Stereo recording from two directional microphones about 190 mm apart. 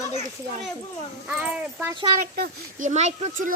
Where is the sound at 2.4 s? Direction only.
40° right (ahead or behind).